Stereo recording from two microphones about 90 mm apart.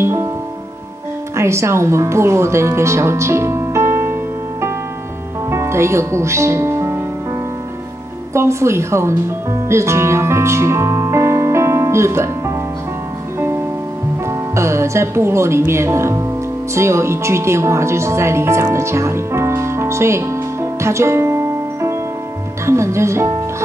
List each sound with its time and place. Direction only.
0.0 s music: 30° right (ahead or behind)
1.3 s speech: 30° right (ahead or behind)
8.3 s speech: 30° right (ahead or behind)
9.7 s music: 30° right (ahead or behind)
14.5 s speech: 30° right (ahead or behind)
20.8 s music: 30° right (ahead or behind)
22.7 s speech: 30° right (ahead or behind)